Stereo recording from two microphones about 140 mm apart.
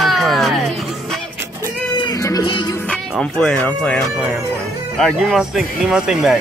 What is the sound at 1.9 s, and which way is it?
Music, 30° left (ahead or behind).